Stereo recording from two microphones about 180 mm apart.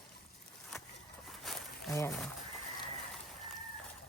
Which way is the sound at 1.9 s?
15° left (ahead or behind).